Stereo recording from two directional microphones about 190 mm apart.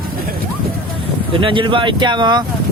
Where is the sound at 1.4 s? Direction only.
25° right (ahead or behind).